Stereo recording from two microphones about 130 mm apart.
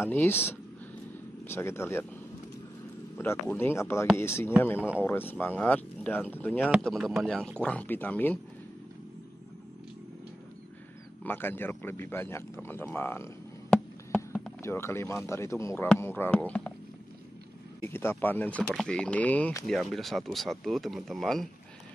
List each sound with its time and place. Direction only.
0.0 s speech: 15° left (ahead or behind)
1.5 s speech: 20° left (ahead or behind)
3.2 s speech: 15° left (ahead or behind)
6.8 s speech: centre (ahead or behind)
11.2 s speech: 15° left (ahead or behind)
12.6 s a sound: 15° left (ahead or behind)
14.6 s speech: 20° left (ahead or behind)
17.8 s speech: 15° left (ahead or behind)
18.6 s speech: centre (ahead or behind)